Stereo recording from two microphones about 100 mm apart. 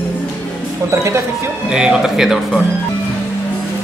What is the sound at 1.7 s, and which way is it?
Speech, 5° right (ahead or behind).